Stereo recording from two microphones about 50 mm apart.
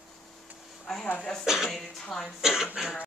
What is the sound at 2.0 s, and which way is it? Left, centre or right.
Speech, centre.